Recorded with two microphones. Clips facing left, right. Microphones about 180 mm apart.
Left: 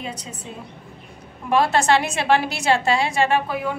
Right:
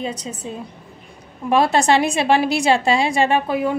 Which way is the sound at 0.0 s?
20° right (ahead or behind).